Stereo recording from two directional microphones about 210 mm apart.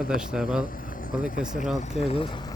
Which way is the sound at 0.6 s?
40° left (ahead or behind).